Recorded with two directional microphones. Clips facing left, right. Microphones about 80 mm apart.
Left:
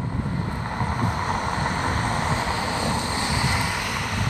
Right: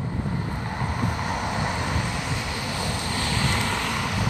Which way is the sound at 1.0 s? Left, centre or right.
Left.